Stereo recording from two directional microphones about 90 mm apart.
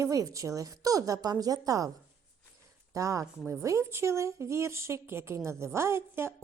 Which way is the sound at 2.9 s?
35° right (ahead or behind).